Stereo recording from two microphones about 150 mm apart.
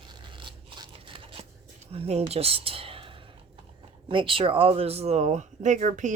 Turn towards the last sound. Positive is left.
turn(degrees=-55)  # may be behind; listen again after turning